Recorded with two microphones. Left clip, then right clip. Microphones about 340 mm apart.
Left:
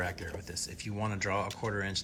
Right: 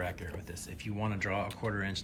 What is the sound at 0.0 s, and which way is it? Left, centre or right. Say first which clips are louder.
Speech: left 2 dB; centre.